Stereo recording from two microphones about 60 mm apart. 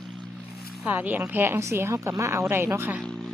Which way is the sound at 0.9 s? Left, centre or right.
Right.